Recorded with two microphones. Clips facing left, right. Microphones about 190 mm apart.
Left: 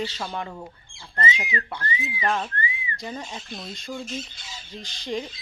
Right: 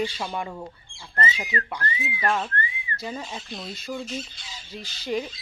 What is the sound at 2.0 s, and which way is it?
Whistling, 5° right (ahead or behind).